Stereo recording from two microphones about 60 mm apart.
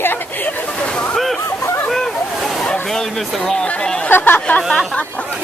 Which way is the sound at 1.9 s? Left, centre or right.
Centre.